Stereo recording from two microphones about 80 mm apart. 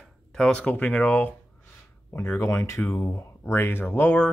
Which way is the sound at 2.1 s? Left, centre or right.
Left.